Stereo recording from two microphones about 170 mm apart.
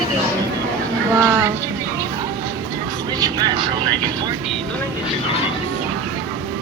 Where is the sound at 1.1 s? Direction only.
15° right (ahead or behind).